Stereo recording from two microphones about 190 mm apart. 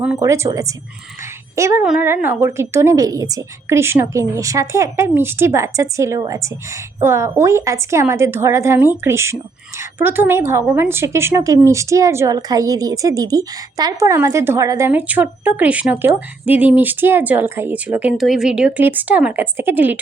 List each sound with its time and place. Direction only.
0.2 s speech: 15° right (ahead or behind)